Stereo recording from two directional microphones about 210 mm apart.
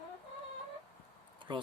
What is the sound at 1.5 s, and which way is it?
Speech, 20° right (ahead or behind).